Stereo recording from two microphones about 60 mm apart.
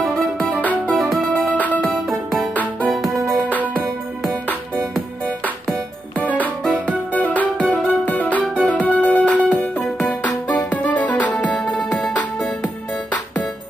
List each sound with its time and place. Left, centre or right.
0.0 s music: centre
0.6 s music: left
0.9 s music: centre
2.5 s music: left
2.9 s music: centre
6.1 s music: left
10.7 s music: left